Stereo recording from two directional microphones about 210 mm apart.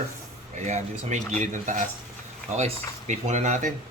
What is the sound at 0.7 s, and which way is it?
Speech, 35° right (ahead or behind).